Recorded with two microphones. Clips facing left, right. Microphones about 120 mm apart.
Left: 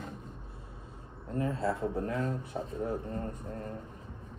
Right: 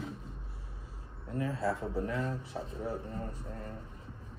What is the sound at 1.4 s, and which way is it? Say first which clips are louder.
Speech: left 2 dB; 25° left (ahead or behind).